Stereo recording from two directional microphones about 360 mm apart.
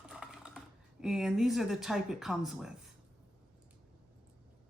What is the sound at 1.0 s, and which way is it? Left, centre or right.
Speech, centre.